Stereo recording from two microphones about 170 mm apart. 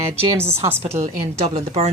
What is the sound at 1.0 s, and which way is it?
Speech, 40° right (ahead or behind).